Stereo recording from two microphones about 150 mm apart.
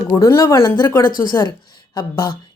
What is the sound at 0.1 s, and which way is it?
A woman's voice, 20° left (ahead or behind).